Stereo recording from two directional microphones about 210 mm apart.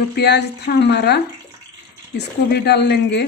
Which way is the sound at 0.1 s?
55° left (ahead or behind).